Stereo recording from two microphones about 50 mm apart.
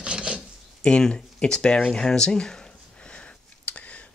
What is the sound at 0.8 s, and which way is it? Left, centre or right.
Speech, centre.